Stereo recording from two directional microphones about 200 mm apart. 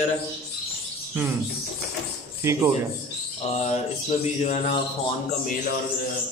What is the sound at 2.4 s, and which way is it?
Speech, 10° right (ahead or behind).